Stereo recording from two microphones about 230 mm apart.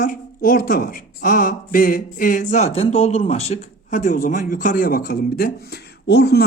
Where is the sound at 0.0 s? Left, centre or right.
Left.